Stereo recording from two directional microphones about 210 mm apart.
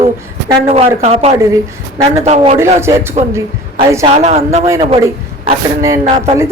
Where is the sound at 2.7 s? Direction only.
10° right (ahead or behind).